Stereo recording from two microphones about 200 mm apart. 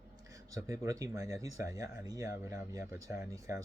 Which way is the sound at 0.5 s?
15° right (ahead or behind).